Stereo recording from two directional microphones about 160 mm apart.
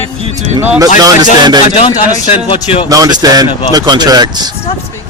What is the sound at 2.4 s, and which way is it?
Speech, 35° left (ahead or behind).